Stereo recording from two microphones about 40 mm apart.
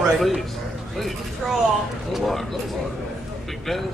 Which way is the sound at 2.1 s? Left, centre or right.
Centre.